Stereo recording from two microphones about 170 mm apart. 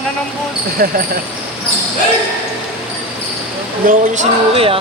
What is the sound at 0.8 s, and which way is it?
Speech, 60° right (ahead or behind).